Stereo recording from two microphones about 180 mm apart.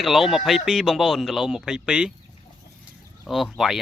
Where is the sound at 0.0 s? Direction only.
Centre (ahead or behind).